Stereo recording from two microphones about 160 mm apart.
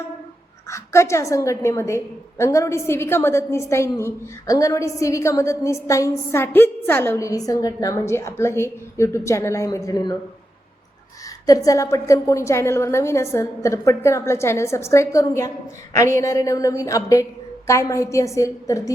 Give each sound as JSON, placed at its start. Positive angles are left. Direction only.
{"t": 0.7, "sound": "a woman's voice", "side_deg": 15}
{"t": 11.4, "sound": "a woman's voice", "side_deg": 20}